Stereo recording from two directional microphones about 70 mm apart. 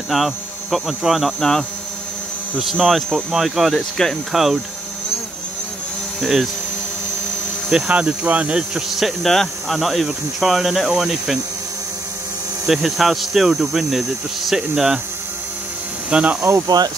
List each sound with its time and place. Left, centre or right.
0.1 s cricket: centre
2.6 s cricket: centre
6.2 s cricket: centre
7.9 s cricket: centre
12.6 s cricket: centre
16.1 s speech: centre
16.6 s speech: right